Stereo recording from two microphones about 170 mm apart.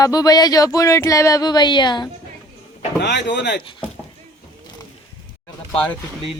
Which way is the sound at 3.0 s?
85° left.